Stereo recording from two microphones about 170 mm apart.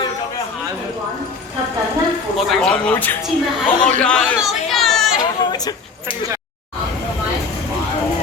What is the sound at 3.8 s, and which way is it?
Chatter, 5° left (ahead or behind).